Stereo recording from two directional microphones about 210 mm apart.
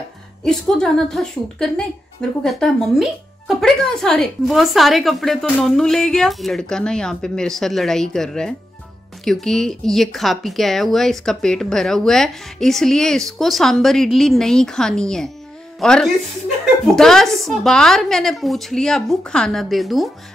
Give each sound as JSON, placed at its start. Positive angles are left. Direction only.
{"t": 0.4, "sound": "speech", "side_deg": 5}